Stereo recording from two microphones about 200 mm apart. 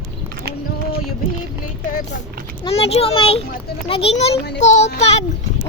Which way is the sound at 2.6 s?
30° left (ahead or behind).